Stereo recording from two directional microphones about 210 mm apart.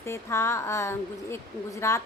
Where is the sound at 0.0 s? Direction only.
10° left (ahead or behind).